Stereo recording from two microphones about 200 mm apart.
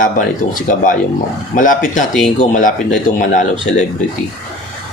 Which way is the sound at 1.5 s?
40° left (ahead or behind).